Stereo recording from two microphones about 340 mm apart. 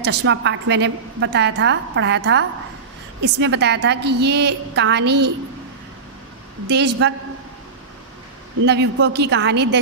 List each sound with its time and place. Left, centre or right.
0.0 s a woman's voice: right
6.7 s a woman's voice: right
8.6 s a woman's voice: right